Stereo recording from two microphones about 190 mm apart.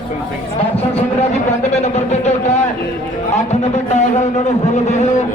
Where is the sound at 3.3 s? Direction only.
40° left (ahead or behind).